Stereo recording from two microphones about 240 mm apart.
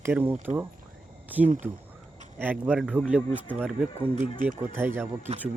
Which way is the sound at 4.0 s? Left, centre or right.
Right.